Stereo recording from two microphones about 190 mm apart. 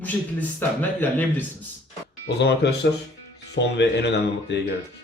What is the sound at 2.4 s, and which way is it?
Speech, 60° left (ahead or behind).